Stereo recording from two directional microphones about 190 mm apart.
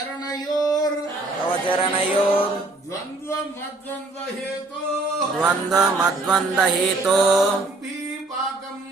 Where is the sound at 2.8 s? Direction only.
15° left (ahead or behind).